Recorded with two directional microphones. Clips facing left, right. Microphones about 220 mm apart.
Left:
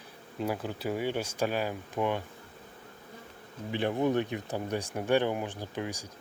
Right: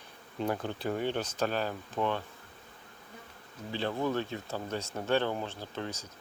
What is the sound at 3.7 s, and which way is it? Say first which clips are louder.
Speech: left 4 dB; 15° left (ahead or behind).